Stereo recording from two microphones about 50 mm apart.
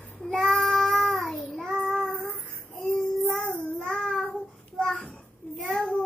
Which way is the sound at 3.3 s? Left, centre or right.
Left.